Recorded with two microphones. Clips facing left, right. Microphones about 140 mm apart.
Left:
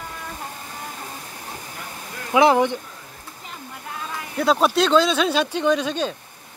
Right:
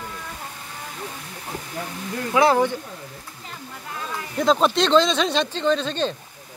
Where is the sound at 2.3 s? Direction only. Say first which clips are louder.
Left 2 dB; 20° left (ahead or behind).